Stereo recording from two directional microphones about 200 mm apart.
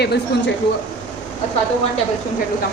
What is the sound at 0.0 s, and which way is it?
Speech, 55° left (ahead or behind).